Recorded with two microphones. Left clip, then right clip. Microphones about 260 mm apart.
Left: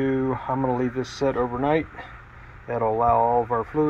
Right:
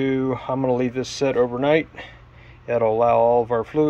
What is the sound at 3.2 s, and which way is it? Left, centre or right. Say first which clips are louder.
Speech: right 3 dB; right.